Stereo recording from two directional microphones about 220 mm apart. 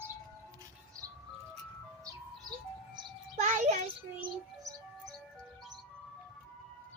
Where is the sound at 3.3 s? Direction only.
35° right (ahead or behind).